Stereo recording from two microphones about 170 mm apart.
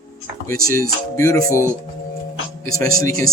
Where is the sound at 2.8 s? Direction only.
20° left (ahead or behind).